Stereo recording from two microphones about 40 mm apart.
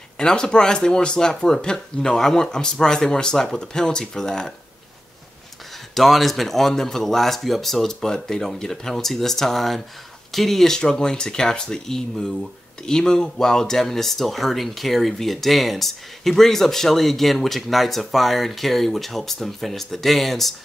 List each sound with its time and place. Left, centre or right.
0.2 s speech: left
5.9 s speech: centre